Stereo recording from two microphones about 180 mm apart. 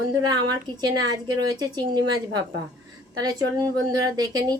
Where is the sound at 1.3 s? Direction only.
20° right (ahead or behind).